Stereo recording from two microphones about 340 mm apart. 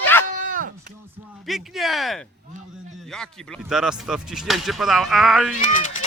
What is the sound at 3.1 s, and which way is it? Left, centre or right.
Speech, centre.